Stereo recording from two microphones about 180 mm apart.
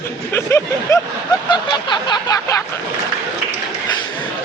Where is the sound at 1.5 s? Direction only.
25° left (ahead or behind).